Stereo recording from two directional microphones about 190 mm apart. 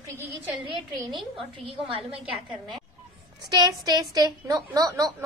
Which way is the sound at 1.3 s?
25° right (ahead or behind).